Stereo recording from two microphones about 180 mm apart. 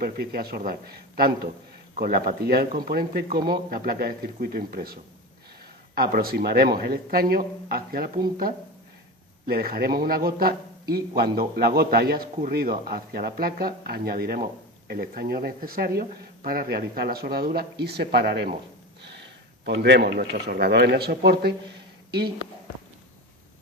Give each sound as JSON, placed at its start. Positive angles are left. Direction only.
{"t": 0.0, "sound": "a man's voice", "side_deg": -60}
{"t": 9.5, "sound": "a man's voice", "side_deg": -55}
{"t": 19.6, "sound": "a man's voice", "side_deg": -70}